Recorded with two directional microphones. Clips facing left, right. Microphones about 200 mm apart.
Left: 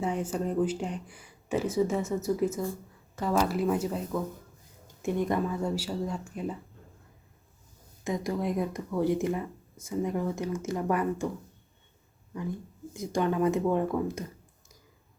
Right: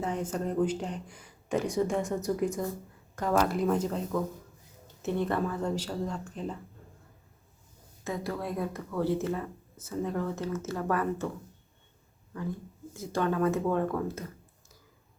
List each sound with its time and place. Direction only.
0.0 s speech: 10° left (ahead or behind)
8.0 s speech: 15° left (ahead or behind)
12.9 s speech: 15° left (ahead or behind)